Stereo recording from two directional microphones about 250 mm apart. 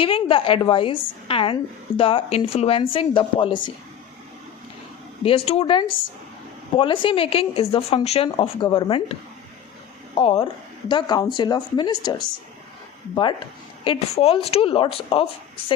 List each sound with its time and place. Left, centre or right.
0.0 s speech: left
5.2 s speech: left
10.2 s speech: left
13.8 s speech: left